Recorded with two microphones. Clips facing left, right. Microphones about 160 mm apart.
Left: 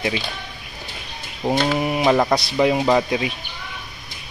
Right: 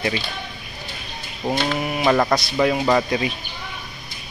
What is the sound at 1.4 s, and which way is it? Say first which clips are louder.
Speech: left 3 dB; 10° left (ahead or behind).